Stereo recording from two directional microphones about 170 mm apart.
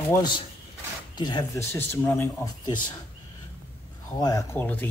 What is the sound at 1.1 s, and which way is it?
Speech, 25° left (ahead or behind).